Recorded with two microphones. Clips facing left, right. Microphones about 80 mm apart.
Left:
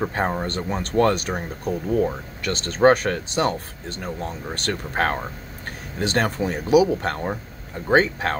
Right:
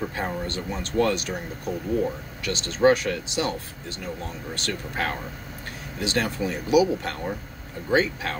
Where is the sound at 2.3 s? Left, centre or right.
Left.